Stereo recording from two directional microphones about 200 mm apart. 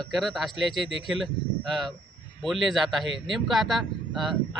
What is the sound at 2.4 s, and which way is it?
Speech, centre (ahead or behind).